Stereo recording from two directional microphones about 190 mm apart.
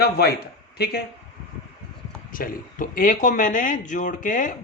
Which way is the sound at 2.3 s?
45° left (ahead or behind).